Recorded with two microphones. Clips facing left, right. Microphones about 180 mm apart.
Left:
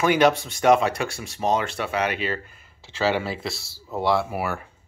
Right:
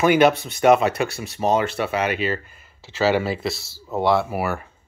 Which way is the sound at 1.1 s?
60° right (ahead or behind).